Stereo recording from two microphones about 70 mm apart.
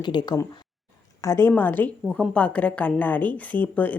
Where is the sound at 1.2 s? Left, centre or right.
Left.